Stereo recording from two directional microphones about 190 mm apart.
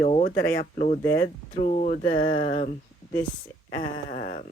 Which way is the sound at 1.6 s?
40° left (ahead or behind).